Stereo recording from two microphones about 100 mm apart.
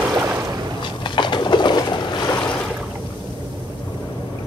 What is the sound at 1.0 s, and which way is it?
Pigeon, 50° left (ahead or behind).